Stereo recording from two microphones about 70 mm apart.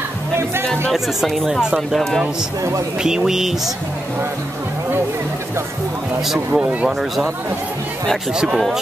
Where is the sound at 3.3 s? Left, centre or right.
Centre.